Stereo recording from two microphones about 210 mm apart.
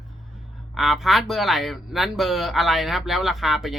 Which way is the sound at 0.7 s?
Centre (ahead or behind).